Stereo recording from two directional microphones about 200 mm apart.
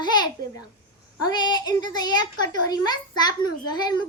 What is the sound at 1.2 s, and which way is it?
A child's voice, 20° left (ahead or behind).